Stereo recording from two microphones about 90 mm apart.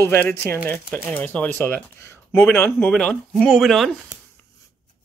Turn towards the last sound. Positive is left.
turn(degrees=0)  # may be behind; listen again after turning